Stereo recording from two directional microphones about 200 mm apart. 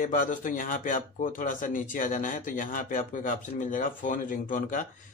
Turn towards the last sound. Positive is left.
turn(degrees=40)  # may be behind; listen again after turning